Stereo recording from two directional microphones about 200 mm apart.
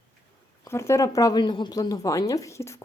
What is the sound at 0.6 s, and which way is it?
Speech, 15° left (ahead or behind).